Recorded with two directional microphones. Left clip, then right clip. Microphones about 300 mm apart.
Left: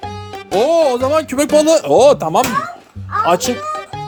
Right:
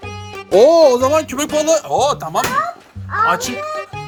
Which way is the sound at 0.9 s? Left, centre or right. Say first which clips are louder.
Right 1 dB; centre.